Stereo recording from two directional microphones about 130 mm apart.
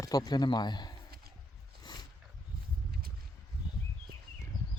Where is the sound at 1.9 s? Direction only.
35° left (ahead or behind).